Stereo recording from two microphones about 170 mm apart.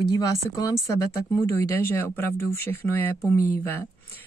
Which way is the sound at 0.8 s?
20° left (ahead or behind).